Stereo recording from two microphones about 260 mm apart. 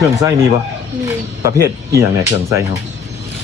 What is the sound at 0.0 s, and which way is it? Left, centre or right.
Speech, centre.